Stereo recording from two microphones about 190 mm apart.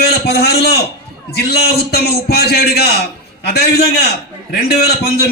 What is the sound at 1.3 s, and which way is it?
A man's voice, 55° left (ahead or behind).